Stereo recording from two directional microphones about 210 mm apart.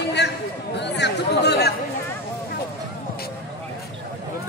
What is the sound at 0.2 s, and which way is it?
Chatter, 55° left (ahead or behind).